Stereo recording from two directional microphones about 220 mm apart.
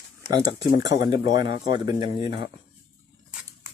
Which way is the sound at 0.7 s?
50° left (ahead or behind).